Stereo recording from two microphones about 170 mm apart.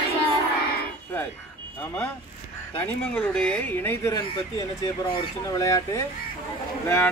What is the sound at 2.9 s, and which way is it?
Speech, 5° left (ahead or behind).